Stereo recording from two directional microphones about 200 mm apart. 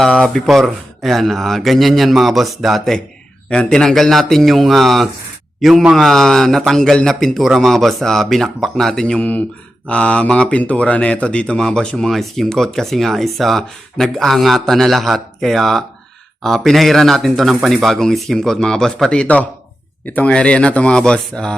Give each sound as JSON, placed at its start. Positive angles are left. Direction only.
{"t": 0.0, "sound": "speech", "side_deg": 0}